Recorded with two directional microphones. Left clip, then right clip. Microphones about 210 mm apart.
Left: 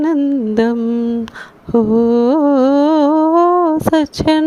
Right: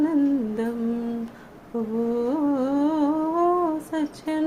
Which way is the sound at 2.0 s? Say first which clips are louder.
Left 8 dB; 40° left (ahead or behind).